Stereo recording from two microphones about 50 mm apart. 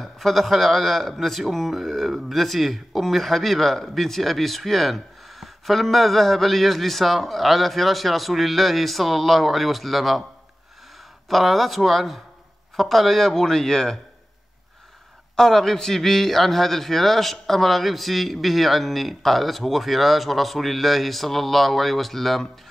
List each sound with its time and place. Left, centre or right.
0.0 s a man's voice: centre
11.2 s a man's voice: centre
15.3 s a man's voice: centre